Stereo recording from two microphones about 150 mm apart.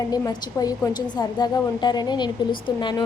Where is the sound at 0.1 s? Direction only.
25° left (ahead or behind).